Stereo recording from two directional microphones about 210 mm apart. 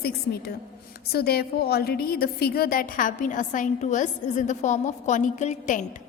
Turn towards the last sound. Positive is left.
turn(degrees=35)  # may be behind; listen again after turning